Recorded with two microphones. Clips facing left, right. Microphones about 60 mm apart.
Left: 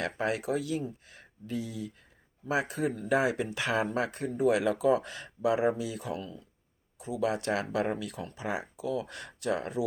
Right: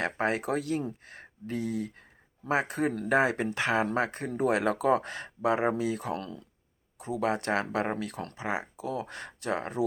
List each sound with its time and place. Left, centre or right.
0.0 s speech: right
6.1 s speech: right
7.0 s speech: right
8.4 s speech: right